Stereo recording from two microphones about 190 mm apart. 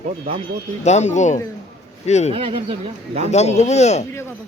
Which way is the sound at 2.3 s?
30° right (ahead or behind).